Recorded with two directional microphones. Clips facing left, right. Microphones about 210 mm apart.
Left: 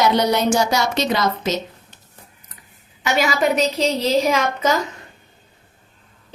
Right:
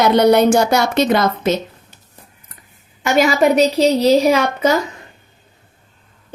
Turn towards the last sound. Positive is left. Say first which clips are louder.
# right 4 dB
turn(degrees=-35)  # may be behind; listen again after turning